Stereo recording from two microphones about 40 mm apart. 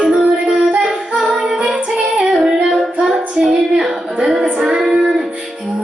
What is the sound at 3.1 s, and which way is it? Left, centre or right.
Music, centre.